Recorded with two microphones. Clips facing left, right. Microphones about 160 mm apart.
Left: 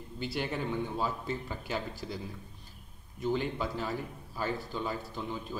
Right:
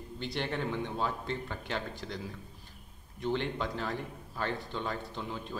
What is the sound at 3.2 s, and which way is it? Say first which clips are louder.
Speech: left 1 dB; 5° left (ahead or behind).